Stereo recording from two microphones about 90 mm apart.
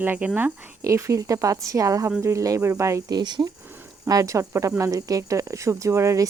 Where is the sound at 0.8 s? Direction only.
35° right (ahead or behind).